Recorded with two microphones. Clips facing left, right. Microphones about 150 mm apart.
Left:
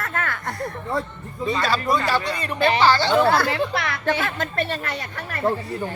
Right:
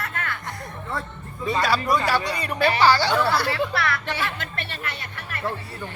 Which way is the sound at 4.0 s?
45° left (ahead or behind).